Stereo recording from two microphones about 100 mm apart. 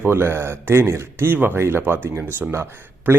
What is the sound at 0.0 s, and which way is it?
Speech, 20° right (ahead or behind).